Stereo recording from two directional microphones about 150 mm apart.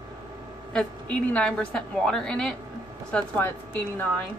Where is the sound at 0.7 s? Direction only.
5° left (ahead or behind).